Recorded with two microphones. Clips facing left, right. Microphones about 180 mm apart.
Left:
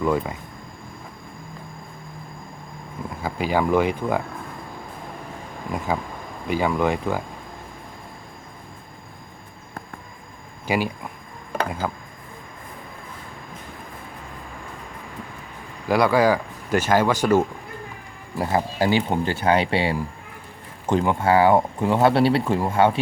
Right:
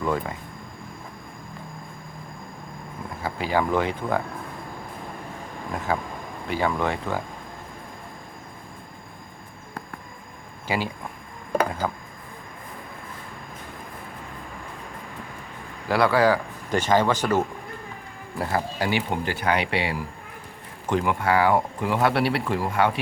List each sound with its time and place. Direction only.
0.0 s speech: 10° left (ahead or behind)
3.2 s speech: 15° left (ahead or behind)
5.7 s speech: 10° left (ahead or behind)
10.7 s speech: 15° left (ahead or behind)
15.9 s speech: 15° left (ahead or behind)
18.3 s speech: 25° left (ahead or behind)